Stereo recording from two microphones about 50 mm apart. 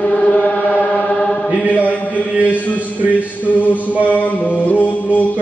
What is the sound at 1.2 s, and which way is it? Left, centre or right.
Chant, centre.